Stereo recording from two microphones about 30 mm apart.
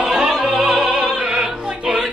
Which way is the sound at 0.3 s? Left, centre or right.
Centre.